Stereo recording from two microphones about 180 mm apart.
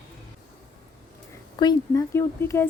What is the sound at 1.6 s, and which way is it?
Speech, 20° left (ahead or behind).